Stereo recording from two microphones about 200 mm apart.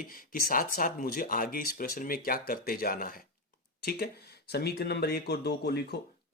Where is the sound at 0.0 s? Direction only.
45° left (ahead or behind).